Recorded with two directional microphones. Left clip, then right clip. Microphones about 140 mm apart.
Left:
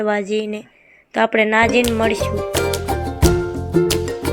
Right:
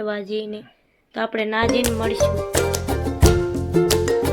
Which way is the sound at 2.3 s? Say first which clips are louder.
Left 2 dB; centre (ahead or behind).